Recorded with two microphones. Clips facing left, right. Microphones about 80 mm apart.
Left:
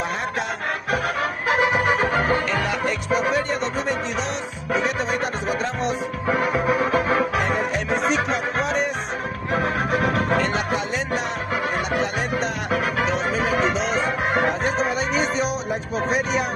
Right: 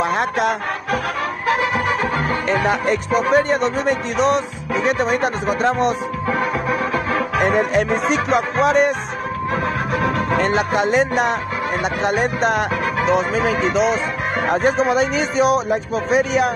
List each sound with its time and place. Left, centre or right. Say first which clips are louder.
0.0 s music: right 7 dB; right
1.5 s music: even; centre
2.5 s speech: right 5 dB; right
6.8 s organ: left 1 dB; left
7.3 s music: right 6 dB; right
10.3 s music: right 4 dB; right
14.5 s speech: right 6 dB; right